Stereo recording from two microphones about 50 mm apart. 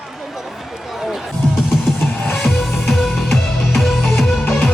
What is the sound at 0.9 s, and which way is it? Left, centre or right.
Music, centre.